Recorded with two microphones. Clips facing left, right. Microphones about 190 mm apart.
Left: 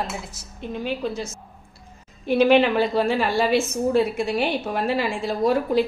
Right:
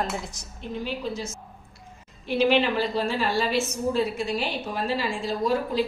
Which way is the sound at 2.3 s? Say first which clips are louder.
Left 5 dB; 55° left (ahead or behind).